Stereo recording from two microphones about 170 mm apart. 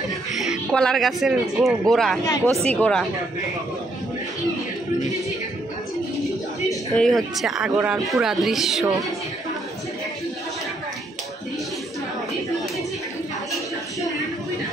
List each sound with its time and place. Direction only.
0.5 s speech: centre (ahead or behind)
2.2 s speech: 20° left (ahead or behind)
2.5 s speech: 40° right (ahead or behind)
2.8 s speech: 5° left (ahead or behind)
6.7 s speech: centre (ahead or behind)